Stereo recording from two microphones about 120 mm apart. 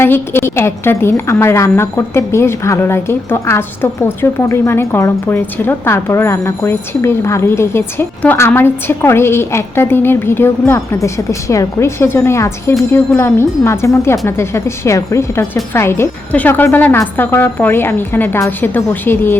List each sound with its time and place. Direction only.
0.0 s a woman's voice: 20° left (ahead or behind)